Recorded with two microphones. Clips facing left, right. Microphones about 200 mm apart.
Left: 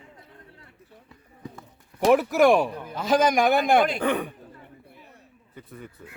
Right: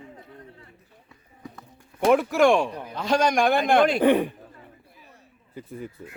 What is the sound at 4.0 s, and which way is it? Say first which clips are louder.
Speech: right 6 dB; 30° right (ahead or behind).